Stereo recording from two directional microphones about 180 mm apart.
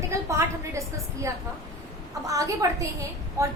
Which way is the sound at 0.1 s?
15° right (ahead or behind).